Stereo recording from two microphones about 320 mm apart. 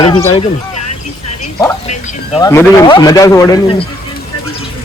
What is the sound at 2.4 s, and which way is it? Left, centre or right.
Speech, centre.